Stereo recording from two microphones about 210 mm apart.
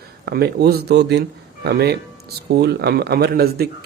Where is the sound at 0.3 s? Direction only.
50° right (ahead or behind).